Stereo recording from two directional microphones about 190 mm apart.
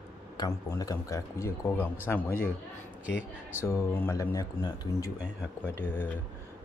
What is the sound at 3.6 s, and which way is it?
A man's voice, 15° left (ahead or behind).